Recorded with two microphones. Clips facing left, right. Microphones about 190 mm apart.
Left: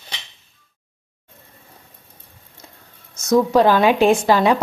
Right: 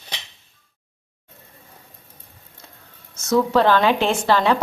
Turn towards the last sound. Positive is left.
turn(degrees=10)  # may be behind; listen again after turning